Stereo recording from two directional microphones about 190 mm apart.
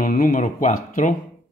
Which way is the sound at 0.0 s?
45° left (ahead or behind).